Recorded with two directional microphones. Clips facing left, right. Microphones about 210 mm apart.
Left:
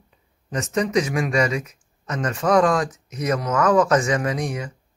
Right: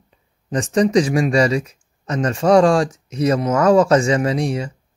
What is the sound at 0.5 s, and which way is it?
Speech, 30° right (ahead or behind).